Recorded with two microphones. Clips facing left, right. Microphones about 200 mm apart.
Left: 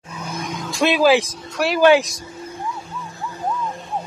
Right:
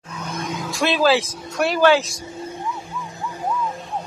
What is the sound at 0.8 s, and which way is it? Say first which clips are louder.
Speech: left 3 dB; 15° left (ahead or behind).